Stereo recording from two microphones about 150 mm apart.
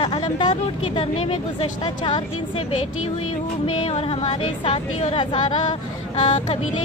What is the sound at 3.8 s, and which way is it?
Speech, 35° left (ahead or behind).